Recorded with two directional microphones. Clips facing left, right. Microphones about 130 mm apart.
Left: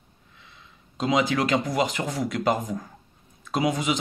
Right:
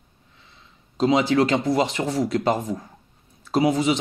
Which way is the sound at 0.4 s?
30° right (ahead or behind).